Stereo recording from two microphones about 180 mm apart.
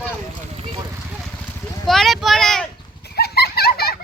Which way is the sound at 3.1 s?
60° left (ahead or behind).